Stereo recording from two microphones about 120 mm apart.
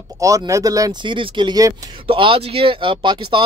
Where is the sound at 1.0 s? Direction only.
40° right (ahead or behind).